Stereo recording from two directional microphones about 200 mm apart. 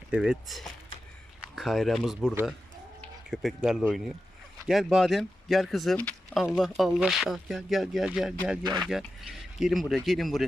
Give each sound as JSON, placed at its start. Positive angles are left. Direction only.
{"t": 0.1, "sound": "speech", "side_deg": -5}
{"t": 8.6, "sound": "speech", "side_deg": -20}
{"t": 8.9, "sound": "speech", "side_deg": 0}